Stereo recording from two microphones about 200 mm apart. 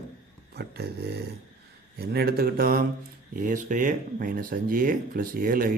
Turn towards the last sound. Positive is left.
turn(degrees=-45)  # may be behind; listen again after turning